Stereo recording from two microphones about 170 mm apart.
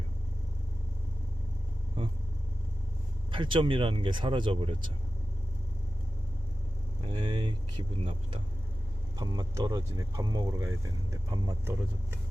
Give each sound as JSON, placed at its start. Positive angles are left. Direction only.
{"t": 3.3, "sound": "speech", "side_deg": -30}
{"t": 7.1, "sound": "speech", "side_deg": -25}